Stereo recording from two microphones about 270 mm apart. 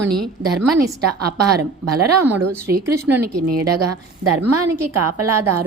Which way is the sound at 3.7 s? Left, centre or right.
Right.